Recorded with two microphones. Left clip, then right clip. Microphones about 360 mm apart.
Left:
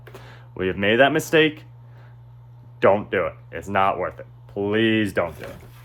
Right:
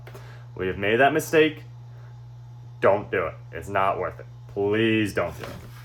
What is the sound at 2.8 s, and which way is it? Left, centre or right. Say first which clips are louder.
Speech: left 3 dB; left.